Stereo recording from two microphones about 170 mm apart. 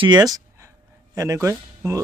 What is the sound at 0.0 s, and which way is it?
Speech, 25° right (ahead or behind).